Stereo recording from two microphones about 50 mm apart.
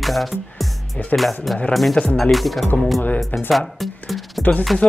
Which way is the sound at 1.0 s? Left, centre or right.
Left.